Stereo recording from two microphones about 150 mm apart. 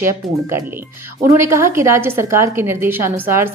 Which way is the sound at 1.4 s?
20° right (ahead or behind).